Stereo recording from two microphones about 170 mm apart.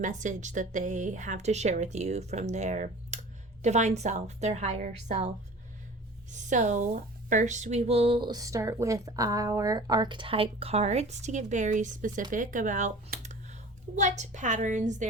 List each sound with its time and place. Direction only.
0.0 s a woman's voice: 45° right (ahead or behind)
6.3 s speech: 45° right (ahead or behind)